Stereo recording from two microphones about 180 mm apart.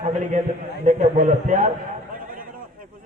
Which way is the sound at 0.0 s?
40° right (ahead or behind).